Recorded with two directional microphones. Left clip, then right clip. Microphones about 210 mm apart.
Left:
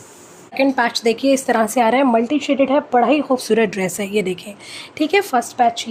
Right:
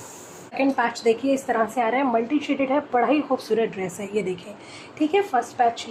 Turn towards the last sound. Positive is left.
turn(degrees=50)  # may be behind; listen again after turning